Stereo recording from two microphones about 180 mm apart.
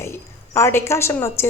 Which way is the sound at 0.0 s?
15° left (ahead or behind).